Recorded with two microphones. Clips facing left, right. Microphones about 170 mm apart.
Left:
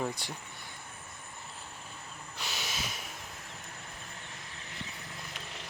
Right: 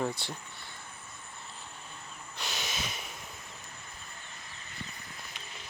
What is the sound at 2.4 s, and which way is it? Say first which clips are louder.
Snort: right 1 dB; 5° left (ahead or behind).